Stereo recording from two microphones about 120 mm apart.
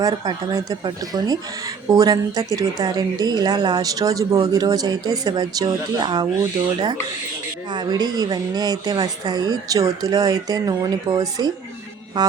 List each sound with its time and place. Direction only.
0.0 s speech: 35° right (ahead or behind)
7.7 s speech: 35° right (ahead or behind)